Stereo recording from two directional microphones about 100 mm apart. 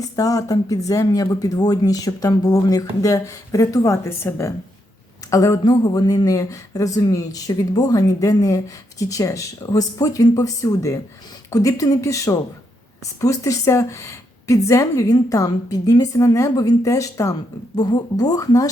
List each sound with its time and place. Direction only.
0.0 s speech: 35° left (ahead or behind)